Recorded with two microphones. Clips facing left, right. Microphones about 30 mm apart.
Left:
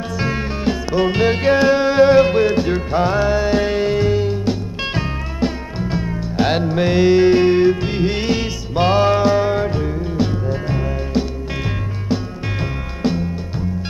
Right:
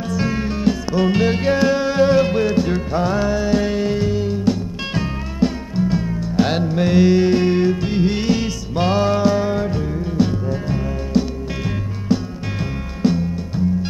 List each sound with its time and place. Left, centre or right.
0.2 s music: centre